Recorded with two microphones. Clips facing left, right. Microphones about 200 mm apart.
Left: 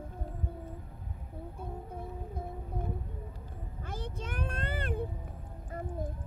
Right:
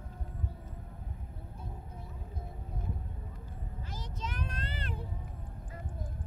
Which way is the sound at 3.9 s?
55° left (ahead or behind).